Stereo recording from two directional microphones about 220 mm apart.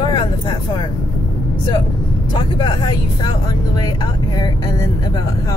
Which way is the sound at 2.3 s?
20° left (ahead or behind).